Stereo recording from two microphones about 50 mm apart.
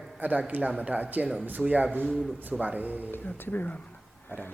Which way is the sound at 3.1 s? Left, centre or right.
Left.